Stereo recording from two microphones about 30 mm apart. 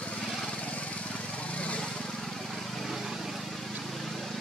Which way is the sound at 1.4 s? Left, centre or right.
Left.